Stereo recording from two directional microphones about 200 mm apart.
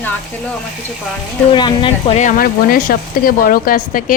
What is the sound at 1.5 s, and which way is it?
Speech, 25° left (ahead or behind).